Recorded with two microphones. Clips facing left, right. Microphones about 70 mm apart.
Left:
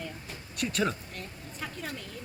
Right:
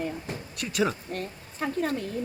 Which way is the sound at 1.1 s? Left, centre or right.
Right.